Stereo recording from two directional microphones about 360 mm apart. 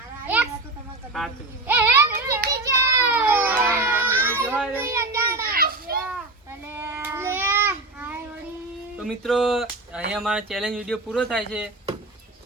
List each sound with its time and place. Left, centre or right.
1.1 s a sound: centre
2.5 s children playing: centre
5.4 s children playing: right
6.1 s babbling: centre
9.0 s a sound: centre
10.1 s a man's voice: centre